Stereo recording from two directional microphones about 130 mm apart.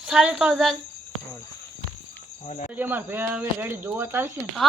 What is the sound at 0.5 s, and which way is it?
Speech, 5° left (ahead or behind).